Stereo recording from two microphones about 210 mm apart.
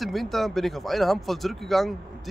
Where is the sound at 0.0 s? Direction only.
Centre (ahead or behind).